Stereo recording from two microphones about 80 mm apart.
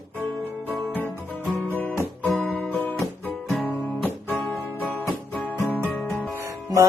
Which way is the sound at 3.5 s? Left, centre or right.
Centre.